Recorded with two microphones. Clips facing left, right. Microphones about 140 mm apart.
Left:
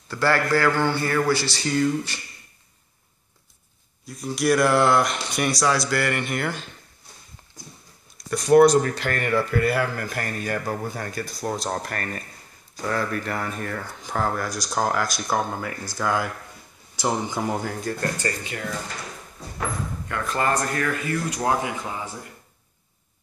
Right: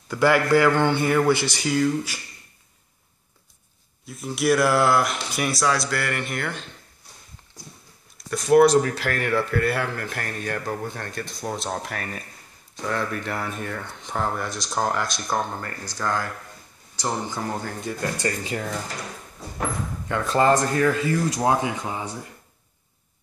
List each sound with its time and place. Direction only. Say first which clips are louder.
0.1 s a man's voice: right 3 dB; 15° right (ahead or behind)
1.7 s speech: even; 5° right (ahead or behind)
4.0 s speech: even; centre (ahead or behind)
8.3 s speech: left 1 dB; centre (ahead or behind)
18.4 s speech: right 3 dB; 35° right (ahead or behind)
20.1 s a man's voice: right 5 dB; 25° right (ahead or behind)